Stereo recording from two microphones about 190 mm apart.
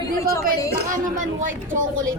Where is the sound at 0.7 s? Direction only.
45° right (ahead or behind).